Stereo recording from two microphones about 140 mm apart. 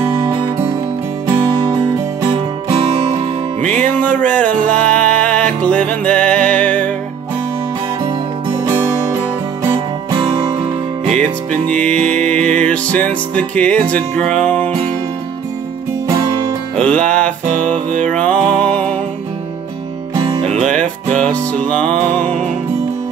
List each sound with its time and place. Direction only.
0.1 s music: 30° right (ahead or behind)
3.8 s music: 10° left (ahead or behind)
10.1 s music: 30° right (ahead or behind)
11.7 s music: 5° left (ahead or behind)
16.8 s music: 5° left (ahead or behind)
20.4 s music: 55° right (ahead or behind)
20.8 s music: 5° left (ahead or behind)